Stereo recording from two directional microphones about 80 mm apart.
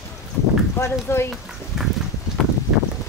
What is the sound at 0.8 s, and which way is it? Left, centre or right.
Speech, left.